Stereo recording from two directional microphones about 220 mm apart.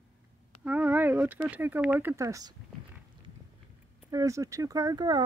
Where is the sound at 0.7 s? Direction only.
5° right (ahead or behind).